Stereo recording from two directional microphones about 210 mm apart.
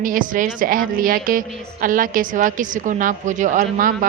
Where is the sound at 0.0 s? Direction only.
40° right (ahead or behind).